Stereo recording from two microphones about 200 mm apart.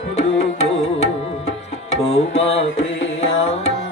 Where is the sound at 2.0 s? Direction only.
30° left (ahead or behind).